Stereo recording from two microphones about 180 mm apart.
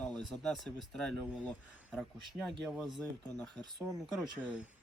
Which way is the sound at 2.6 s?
Centre (ahead or behind).